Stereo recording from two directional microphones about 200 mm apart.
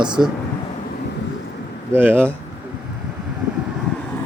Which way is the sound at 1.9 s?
10° right (ahead or behind).